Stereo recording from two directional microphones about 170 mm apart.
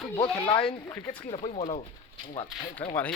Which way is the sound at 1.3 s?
35° left (ahead or behind).